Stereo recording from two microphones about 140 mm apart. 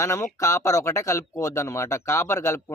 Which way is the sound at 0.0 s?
20° left (ahead or behind).